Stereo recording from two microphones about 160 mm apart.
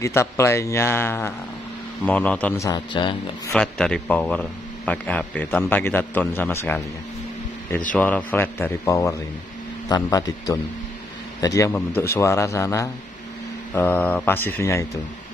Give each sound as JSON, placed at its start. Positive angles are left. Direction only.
{"t": 0.0, "sound": "speech", "side_deg": 15}
{"t": 2.6, "sound": "a man's voice", "side_deg": 25}
{"t": 3.5, "sound": "speech", "side_deg": 5}
{"t": 7.9, "sound": "a man's voice", "side_deg": 10}